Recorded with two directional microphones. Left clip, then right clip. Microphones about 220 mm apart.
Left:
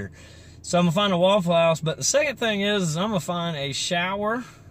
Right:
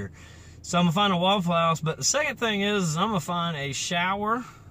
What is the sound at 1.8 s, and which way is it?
Speech, 5° right (ahead or behind).